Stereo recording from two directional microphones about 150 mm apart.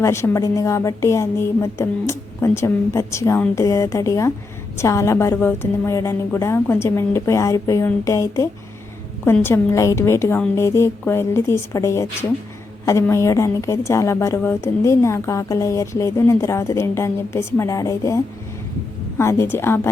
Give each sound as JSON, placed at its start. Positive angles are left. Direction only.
{"t": 0.0, "sound": "a woman's voice", "side_deg": 20}